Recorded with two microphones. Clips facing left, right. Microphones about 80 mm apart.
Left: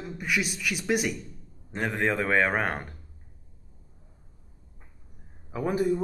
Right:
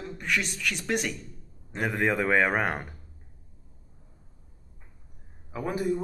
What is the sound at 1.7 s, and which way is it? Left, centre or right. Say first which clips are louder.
Speech: right 1 dB; centre.